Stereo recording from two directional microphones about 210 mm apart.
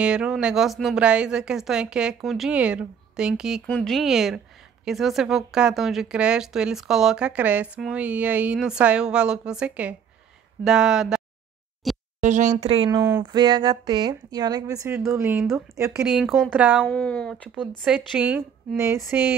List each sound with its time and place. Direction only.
0.0 s speech: 5° right (ahead or behind)
11.8 s a sound: centre (ahead or behind)
12.2 s a woman's voice: 35° right (ahead or behind); by 15.9 s 15° right (ahead or behind)
16.0 s speech: centre (ahead or behind)
16.8 s speech: 5° left (ahead or behind)